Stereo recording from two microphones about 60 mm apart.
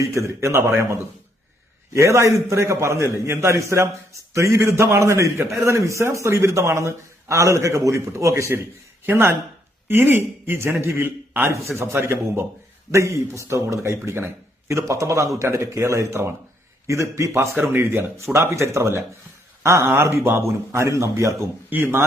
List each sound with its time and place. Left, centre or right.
0.0 s a man's voice: right
9.0 s a man's voice: right
17.6 s a man's voice: right
20.8 s a man's voice: right